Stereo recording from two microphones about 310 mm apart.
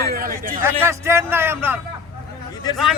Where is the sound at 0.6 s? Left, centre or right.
Centre.